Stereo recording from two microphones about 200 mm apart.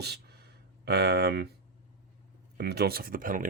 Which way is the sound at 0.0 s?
55° right (ahead or behind).